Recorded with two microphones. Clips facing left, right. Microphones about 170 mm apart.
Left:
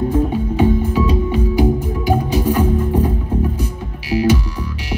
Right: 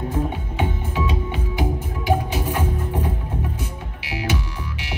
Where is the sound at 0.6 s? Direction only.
35° left (ahead or behind).